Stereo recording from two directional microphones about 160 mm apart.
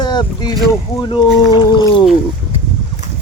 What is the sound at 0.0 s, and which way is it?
Speech, 25° left (ahead or behind).